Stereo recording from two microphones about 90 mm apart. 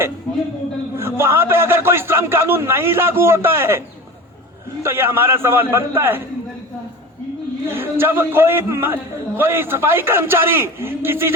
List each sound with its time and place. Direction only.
0.9 s a man's voice: 30° right (ahead or behind)
7.7 s a man's voice: 25° right (ahead or behind)